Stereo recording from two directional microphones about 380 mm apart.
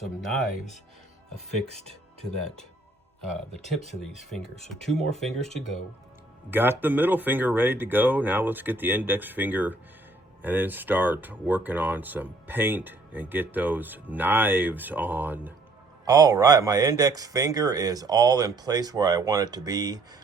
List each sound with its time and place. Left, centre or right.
0.0 s speech: centre
1.7 s speech: centre
4.7 s speech: centre
6.5 s speech: centre